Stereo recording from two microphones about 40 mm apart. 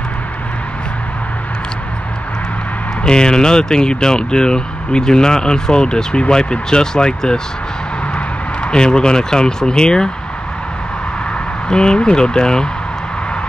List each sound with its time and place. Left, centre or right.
3.0 s speech: centre
8.6 s speech: left
11.7 s speech: left